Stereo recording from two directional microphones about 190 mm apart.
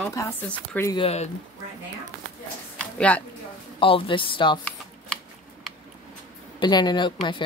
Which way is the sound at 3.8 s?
30° left (ahead or behind).